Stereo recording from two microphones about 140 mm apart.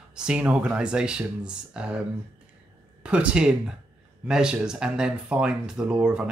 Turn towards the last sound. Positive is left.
turn(degrees=-5)  # may be behind; listen again after turning